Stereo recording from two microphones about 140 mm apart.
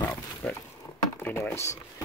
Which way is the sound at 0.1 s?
15° left (ahead or behind).